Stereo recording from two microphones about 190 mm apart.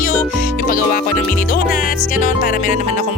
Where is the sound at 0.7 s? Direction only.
50° left (ahead or behind).